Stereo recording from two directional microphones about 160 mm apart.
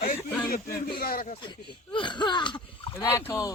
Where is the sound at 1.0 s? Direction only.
70° left (ahead or behind).